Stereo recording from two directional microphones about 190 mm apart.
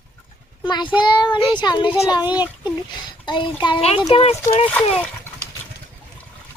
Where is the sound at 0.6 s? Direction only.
25° left (ahead or behind).